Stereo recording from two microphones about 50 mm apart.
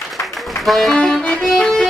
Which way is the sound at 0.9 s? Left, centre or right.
Centre.